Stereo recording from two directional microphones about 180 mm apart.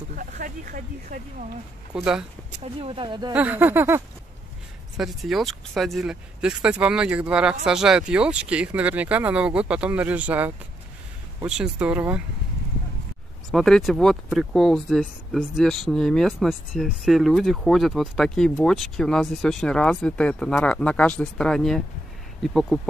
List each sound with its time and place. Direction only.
0.1 s speech: 50° right (ahead or behind)
2.0 s speech: 5° right (ahead or behind)
2.6 s speech: 30° right (ahead or behind)
3.3 s speech: 10° right (ahead or behind)
4.9 s speech: centre (ahead or behind)
13.5 s speech: centre (ahead or behind)